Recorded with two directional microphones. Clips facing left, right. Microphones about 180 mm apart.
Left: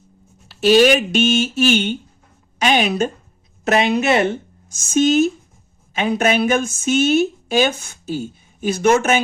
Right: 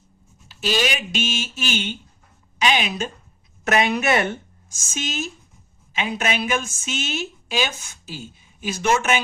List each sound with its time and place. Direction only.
0.4 s speech: 60° left (ahead or behind)
3.7 s speech: 30° left (ahead or behind)
4.9 s a woman's voice: 60° left (ahead or behind)